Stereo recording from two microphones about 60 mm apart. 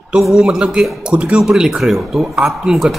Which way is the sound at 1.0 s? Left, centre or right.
Centre.